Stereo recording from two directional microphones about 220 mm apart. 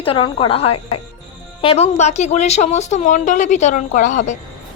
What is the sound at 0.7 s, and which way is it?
Speech, 90° left.